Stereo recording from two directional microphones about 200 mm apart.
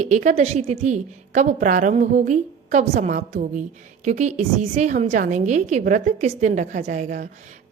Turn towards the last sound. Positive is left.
turn(degrees=-35)  # may be behind; listen again after turning